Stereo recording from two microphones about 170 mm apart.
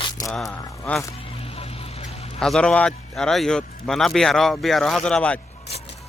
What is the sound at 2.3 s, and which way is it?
Speech, 5° left (ahead or behind).